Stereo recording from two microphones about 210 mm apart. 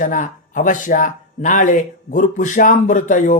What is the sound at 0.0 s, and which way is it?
Speech, 40° left (ahead or behind).